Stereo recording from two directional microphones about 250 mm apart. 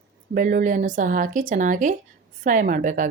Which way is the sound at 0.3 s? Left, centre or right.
Right.